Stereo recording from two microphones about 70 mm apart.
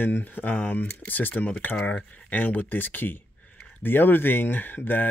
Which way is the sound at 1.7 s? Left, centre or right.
Centre.